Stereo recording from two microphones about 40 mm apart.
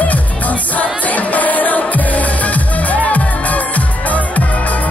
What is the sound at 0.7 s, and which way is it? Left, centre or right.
Music, left.